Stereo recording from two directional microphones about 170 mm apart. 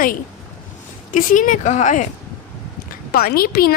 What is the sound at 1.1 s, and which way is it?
Speech, 50° left (ahead or behind).